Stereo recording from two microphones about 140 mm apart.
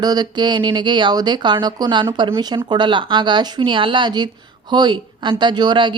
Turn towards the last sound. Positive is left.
turn(degrees=-35)  # may be behind; listen again after turning